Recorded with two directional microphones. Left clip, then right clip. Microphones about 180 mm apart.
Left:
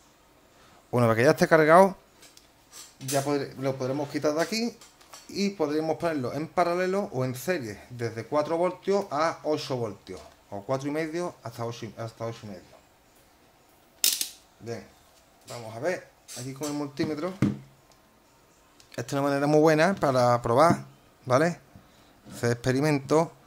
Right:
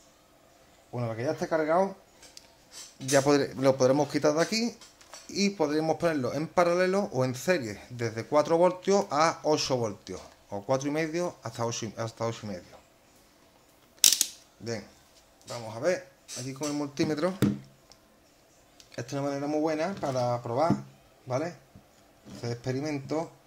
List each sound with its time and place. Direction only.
0.9 s speech: 45° left (ahead or behind)
3.1 s speech: 35° right (ahead or behind)
4.2 s a man's voice: 15° right (ahead or behind)
4.5 s a man's voice: centre (ahead or behind); by 12.5 s 25° right (ahead or behind)
15.4 s a man's voice: 10° right (ahead or behind)
18.9 s speech: 20° left (ahead or behind)